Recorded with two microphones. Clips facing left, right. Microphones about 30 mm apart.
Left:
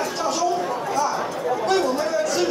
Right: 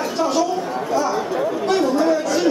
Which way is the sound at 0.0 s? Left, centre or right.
Centre.